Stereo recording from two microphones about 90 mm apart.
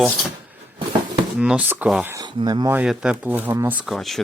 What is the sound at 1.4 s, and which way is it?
Speech, 15° right (ahead or behind).